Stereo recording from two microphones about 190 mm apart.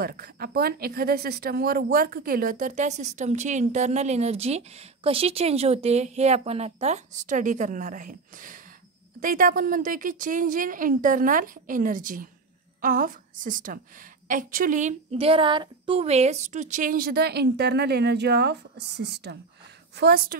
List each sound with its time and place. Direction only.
0.0 s a woman's voice: 50° right (ahead or behind)